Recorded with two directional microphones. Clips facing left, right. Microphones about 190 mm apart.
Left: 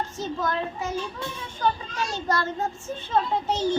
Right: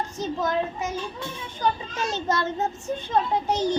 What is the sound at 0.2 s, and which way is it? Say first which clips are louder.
A child's voice: right 3 dB; 20° right (ahead or behind).